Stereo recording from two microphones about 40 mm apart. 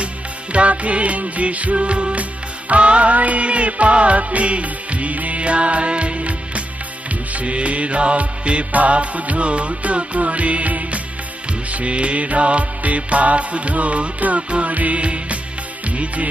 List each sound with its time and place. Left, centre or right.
0.5 s music: right